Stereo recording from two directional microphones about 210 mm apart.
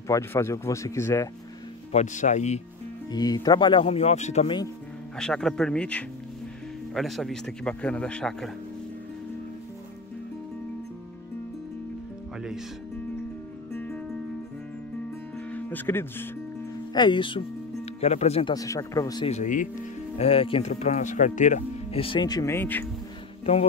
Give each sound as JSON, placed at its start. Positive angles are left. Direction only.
{"t": 0.1, "sound": "speech", "side_deg": 15}
{"t": 1.9, "sound": "speech", "side_deg": 35}
{"t": 3.1, "sound": "speech", "side_deg": 20}
{"t": 5.1, "sound": "speech", "side_deg": 5}
{"t": 13.7, "sound": "music", "side_deg": 5}
{"t": 15.3, "sound": "music", "side_deg": 10}
{"t": 16.9, "sound": "speech", "side_deg": 20}
{"t": 18.5, "sound": "speech", "side_deg": 15}
{"t": 19.2, "sound": "speech", "side_deg": 35}
{"t": 23.4, "sound": "music", "side_deg": 30}